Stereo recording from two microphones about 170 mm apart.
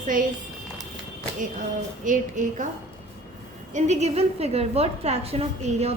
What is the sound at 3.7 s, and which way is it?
A woman's voice, 40° right (ahead or behind).